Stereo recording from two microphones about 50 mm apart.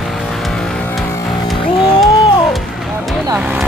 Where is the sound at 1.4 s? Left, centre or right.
Centre.